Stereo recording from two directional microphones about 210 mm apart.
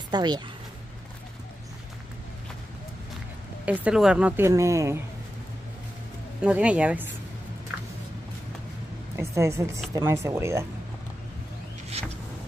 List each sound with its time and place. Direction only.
0.1 s speech: 20° right (ahead or behind)
3.6 s a woman's voice: 5° right (ahead or behind)
6.4 s a woman's voice: 5° right (ahead or behind)
9.1 s a woman's voice: 15° right (ahead or behind)
12.0 s vehicle: 30° right (ahead or behind)